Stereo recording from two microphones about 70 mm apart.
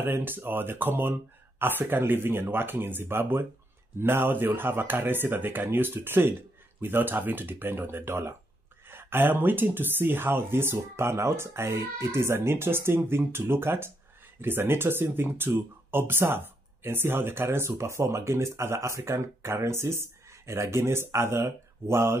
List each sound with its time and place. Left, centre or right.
0.0 s speech: right